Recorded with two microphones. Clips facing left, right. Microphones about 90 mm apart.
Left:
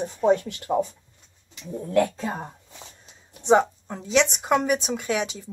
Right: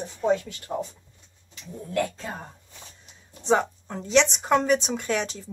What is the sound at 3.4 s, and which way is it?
Speech, 20° left (ahead or behind).